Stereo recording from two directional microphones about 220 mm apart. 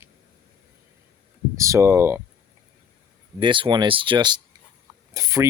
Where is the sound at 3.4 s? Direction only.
20° right (ahead or behind).